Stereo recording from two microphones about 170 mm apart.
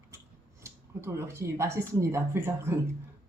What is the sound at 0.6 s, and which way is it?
Speech, 15° right (ahead or behind).